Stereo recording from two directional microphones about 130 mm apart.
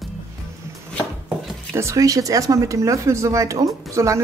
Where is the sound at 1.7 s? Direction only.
25° right (ahead or behind).